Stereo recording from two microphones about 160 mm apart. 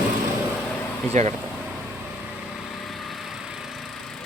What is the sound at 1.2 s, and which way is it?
Speech, 45° right (ahead or behind).